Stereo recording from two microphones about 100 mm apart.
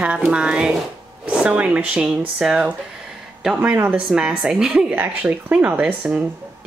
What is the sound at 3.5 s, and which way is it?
Speech, 20° right (ahead or behind).